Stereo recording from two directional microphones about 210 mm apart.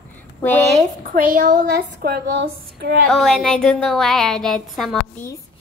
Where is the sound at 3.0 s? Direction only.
Centre (ahead or behind).